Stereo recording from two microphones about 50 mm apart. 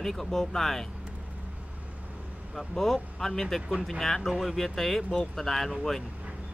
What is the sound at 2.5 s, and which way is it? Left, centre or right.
Speech, centre.